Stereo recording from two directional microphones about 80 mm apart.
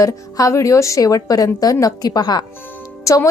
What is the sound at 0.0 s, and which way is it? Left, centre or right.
A woman's voice, left.